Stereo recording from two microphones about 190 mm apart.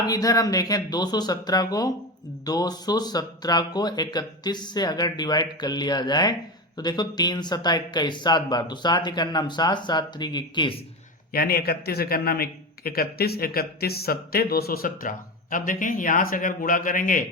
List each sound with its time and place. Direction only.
0.1 s speech: 20° left (ahead or behind)
11.3 s a man's voice: 55° left (ahead or behind)